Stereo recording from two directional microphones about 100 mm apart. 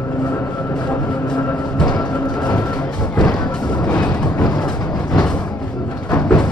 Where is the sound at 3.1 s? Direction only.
10° left (ahead or behind).